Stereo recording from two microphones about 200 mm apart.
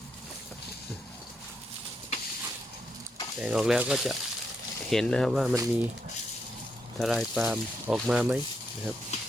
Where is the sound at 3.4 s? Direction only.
5° right (ahead or behind).